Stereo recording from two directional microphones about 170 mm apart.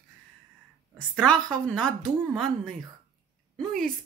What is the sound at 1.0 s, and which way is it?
Speech, 5° left (ahead or behind).